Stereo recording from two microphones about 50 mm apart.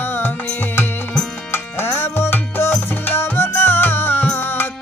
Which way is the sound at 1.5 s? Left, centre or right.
Left.